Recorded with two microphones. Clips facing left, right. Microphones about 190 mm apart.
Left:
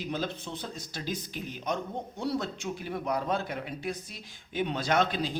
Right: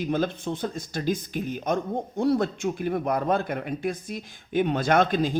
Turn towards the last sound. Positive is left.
turn(degrees=-50)  # may be behind; listen again after turning